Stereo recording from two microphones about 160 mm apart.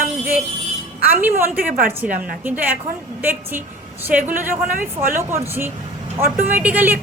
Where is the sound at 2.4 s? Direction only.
10° right (ahead or behind).